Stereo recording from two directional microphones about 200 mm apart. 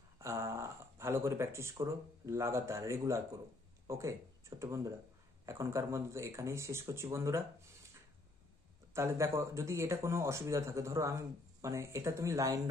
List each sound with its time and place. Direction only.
0.2 s speech: 15° right (ahead or behind)
8.9 s speech: 15° right (ahead or behind)